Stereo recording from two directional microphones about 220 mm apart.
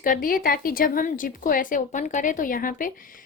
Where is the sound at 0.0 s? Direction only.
40° left (ahead or behind).